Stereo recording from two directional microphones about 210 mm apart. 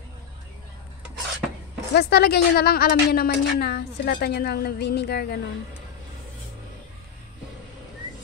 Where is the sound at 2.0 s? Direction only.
50° left (ahead or behind).